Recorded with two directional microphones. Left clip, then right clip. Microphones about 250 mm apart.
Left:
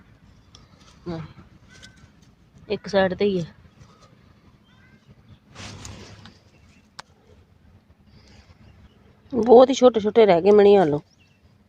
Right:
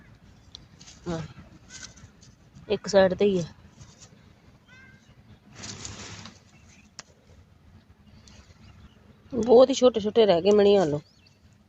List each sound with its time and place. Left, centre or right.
2.6 s a woman's voice: centre
9.3 s speech: left